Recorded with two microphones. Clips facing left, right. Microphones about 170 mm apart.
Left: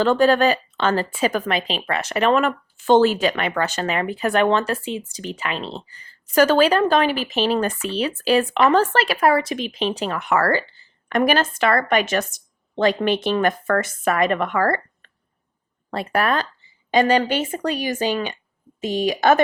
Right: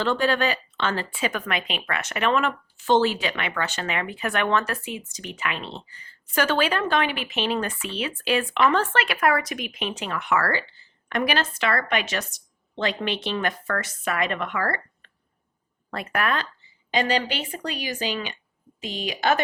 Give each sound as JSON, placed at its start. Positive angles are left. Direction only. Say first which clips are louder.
{"t": 0.0, "sound": "a woman's voice", "louder": "left 7 dB", "side_deg": 45}
{"t": 15.9, "sound": "a woman's voice", "louder": "left 5 dB", "side_deg": 30}